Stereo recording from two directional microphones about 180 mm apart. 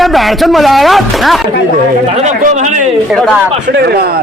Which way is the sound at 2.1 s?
40° right (ahead or behind).